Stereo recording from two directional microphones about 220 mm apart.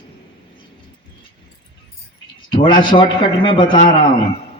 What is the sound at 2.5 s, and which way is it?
A man's voice, 20° left (ahead or behind).